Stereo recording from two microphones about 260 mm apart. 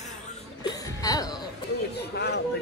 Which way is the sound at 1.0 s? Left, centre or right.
Centre.